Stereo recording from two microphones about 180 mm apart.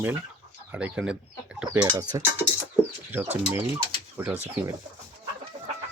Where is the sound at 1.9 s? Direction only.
20° right (ahead or behind).